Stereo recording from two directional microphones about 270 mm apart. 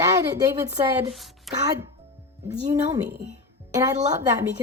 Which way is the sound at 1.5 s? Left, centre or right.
Centre.